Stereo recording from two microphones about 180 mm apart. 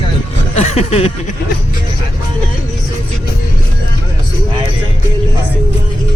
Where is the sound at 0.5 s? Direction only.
35° left (ahead or behind).